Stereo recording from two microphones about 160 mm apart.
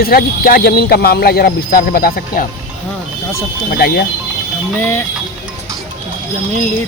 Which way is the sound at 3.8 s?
75° left (ahead or behind).